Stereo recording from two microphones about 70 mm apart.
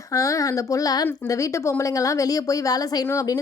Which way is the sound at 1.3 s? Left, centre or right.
Left.